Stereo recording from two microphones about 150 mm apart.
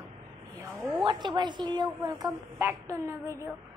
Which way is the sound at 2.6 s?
20° right (ahead or behind).